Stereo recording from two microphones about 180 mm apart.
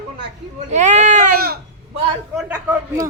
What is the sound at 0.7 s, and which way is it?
Speech, 40° right (ahead or behind).